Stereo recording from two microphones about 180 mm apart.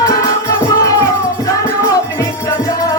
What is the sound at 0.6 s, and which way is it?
Music, 20° left (ahead or behind).